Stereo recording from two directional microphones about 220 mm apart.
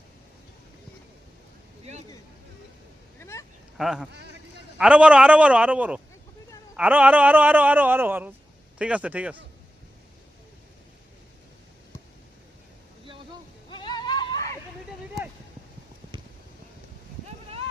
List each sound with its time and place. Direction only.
1.8 s vehicle: 30° right (ahead or behind)
3.2 s vehicle: 10° left (ahead or behind)
3.8 s a man's voice: centre (ahead or behind)
13.7 s a sound: 20° left (ahead or behind)